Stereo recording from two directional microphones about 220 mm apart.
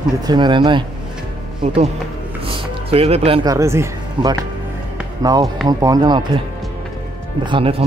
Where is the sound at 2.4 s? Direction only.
25° right (ahead or behind).